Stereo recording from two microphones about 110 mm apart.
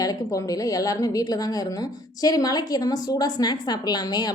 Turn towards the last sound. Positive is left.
turn(degrees=40)  # may be behind; listen again after turning